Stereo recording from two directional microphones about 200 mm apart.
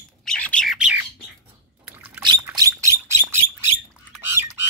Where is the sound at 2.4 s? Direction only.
15° right (ahead or behind).